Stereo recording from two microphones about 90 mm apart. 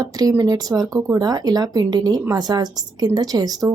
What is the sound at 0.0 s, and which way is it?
Speech, 45° right (ahead or behind).